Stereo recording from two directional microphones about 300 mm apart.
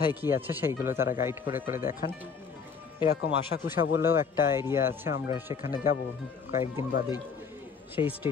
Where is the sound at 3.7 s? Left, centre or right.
Centre.